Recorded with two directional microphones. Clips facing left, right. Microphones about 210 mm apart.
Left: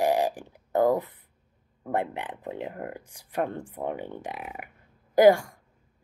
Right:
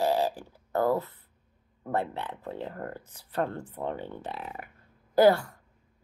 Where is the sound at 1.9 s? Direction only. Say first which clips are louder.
Left 1 dB; 15° left (ahead or behind).